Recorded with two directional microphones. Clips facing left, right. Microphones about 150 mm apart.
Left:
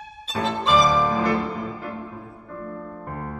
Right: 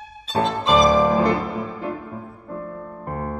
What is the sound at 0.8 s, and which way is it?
Music, 45° right (ahead or behind).